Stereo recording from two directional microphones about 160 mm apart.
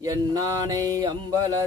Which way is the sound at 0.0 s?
20° right (ahead or behind).